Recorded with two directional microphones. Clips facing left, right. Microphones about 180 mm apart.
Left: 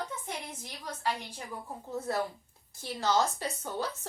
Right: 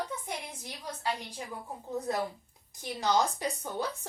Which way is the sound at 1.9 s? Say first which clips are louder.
Even; 15° right (ahead or behind).